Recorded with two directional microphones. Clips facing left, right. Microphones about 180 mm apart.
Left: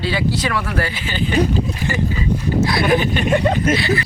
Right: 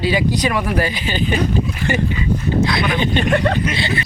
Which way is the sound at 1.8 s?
10° left (ahead or behind).